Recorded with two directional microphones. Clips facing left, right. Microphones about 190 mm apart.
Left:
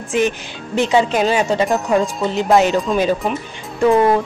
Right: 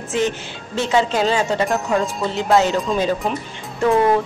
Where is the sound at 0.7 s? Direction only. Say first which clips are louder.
Left 3 dB; 15° left (ahead or behind).